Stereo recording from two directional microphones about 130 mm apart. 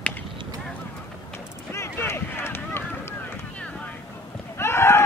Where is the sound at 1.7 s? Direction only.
20° left (ahead or behind).